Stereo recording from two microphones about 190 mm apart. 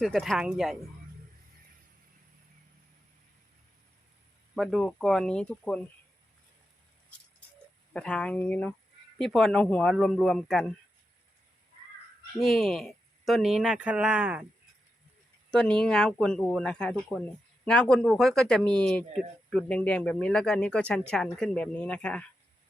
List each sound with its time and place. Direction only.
0.0 s speech: centre (ahead or behind)
4.5 s speech: centre (ahead or behind)
7.9 s speech: 5° left (ahead or behind)
12.4 s speech: centre (ahead or behind)
15.4 s speech: 5° left (ahead or behind)